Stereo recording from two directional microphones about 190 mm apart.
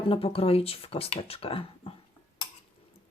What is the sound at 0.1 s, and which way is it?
Speech, 30° left (ahead or behind).